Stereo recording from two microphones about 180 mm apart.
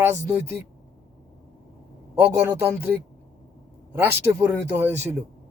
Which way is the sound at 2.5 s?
10° right (ahead or behind).